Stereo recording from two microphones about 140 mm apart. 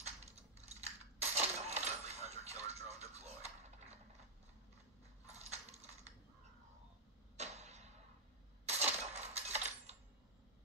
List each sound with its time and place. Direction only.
0.0 s coin: 50° right (ahead or behind)
5.3 s coin: 50° right (ahead or behind)
7.3 s a sound: 50° right (ahead or behind)